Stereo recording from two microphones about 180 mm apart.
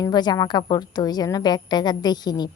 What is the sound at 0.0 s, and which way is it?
A woman's voice, 25° left (ahead or behind).